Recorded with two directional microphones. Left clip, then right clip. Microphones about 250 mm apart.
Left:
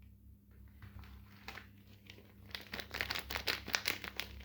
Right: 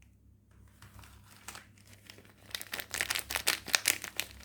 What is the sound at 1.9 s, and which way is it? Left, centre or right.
Crumpling, centre.